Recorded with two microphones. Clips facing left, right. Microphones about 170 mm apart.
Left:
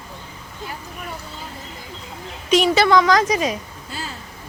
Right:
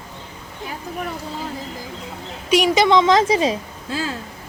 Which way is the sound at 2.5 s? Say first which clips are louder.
Even; 10° right (ahead or behind).